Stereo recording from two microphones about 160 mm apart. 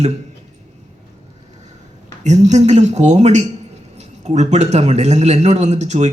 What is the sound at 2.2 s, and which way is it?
A man's voice, 45° right (ahead or behind).